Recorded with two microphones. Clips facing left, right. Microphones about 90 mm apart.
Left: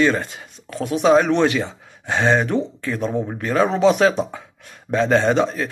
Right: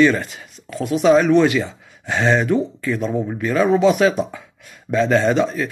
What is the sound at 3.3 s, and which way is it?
Speech, 35° left (ahead or behind).